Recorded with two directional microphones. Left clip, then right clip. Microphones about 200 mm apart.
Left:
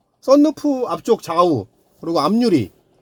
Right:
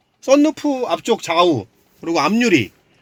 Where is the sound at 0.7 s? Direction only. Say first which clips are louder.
Right 1 dB; 45° left (ahead or behind).